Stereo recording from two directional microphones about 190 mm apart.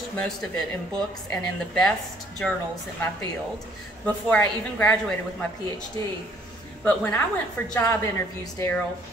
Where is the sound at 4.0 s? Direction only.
10° left (ahead or behind).